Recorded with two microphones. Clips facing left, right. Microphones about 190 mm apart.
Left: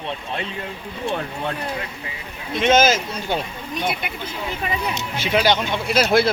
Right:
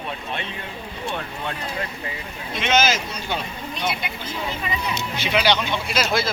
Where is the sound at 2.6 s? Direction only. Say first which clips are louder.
Left 5 dB; 50° left (ahead or behind).